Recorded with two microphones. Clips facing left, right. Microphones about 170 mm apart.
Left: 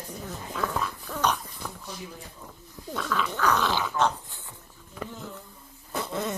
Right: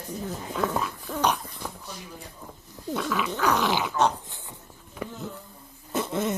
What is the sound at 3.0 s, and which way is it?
Dog, 15° right (ahead or behind).